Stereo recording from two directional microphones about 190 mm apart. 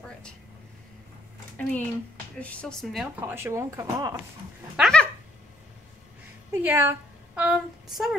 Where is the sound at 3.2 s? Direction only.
15° right (ahead or behind).